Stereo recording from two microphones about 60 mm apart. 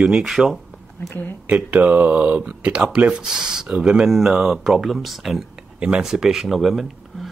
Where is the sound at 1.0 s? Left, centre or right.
Left.